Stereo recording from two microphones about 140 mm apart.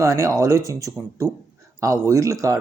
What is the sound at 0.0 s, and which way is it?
Speech, 20° right (ahead or behind).